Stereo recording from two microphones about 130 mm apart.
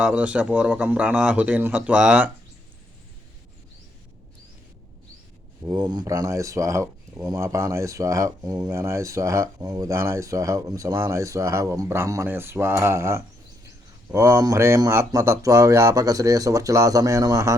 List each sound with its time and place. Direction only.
0.0 s a man's voice: 10° right (ahead or behind)
5.6 s speech: 30° right (ahead or behind)